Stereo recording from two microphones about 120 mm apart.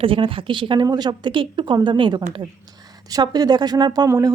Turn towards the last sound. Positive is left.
turn(degrees=-30)  # may be behind; listen again after turning